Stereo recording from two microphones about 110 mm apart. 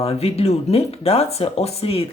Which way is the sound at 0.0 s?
70° left (ahead or behind).